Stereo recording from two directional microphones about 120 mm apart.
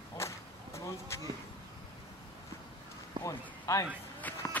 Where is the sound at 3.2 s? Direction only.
30° left (ahead or behind).